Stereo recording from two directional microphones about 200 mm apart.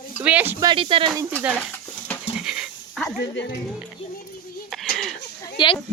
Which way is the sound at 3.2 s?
60° left (ahead or behind).